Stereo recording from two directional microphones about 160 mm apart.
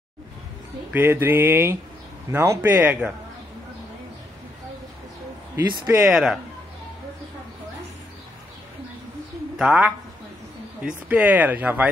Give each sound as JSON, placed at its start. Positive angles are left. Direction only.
{"t": 0.9, "sound": "speech", "side_deg": -10}
{"t": 5.7, "sound": "speech", "side_deg": -30}
{"t": 6.0, "sound": "speech", "side_deg": -5}
{"t": 9.6, "sound": "speech", "side_deg": -5}